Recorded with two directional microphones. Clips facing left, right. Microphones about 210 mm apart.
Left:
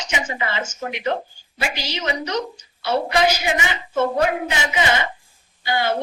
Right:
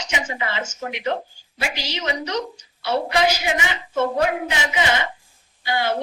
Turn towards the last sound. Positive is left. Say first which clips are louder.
# left 1 dB
turn(degrees=50)  # may be behind; listen again after turning